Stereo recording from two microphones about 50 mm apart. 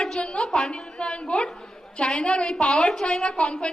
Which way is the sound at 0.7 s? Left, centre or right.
Left.